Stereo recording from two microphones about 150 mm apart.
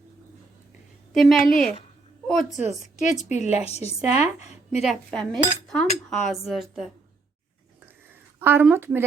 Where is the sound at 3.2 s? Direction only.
50° left (ahead or behind).